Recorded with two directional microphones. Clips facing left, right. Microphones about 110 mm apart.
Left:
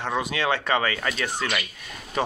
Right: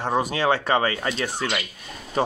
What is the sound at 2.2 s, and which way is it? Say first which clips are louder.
Speech: right 3 dB; 30° right (ahead or behind).